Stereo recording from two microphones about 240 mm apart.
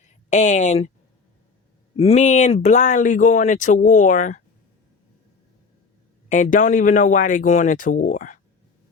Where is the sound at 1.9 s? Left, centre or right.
Left.